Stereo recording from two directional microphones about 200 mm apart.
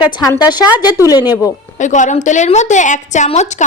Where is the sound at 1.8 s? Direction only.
35° left (ahead or behind).